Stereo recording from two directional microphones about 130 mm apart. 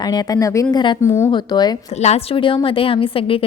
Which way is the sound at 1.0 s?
20° left (ahead or behind).